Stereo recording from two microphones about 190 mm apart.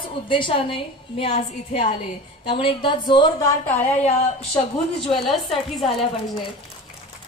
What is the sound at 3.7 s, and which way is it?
Speech, 35° left (ahead or behind).